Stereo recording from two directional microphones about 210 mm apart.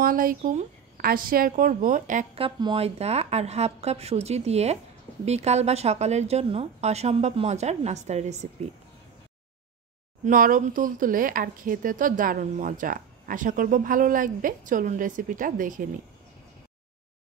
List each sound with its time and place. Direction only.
0.0 s speech: 40° right (ahead or behind)
10.2 s speech: 40° right (ahead or behind)